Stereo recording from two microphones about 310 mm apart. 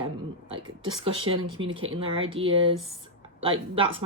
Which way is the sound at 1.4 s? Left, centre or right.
Right.